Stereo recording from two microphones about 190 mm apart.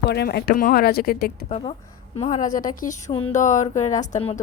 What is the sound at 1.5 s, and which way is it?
Speech, 30° left (ahead or behind).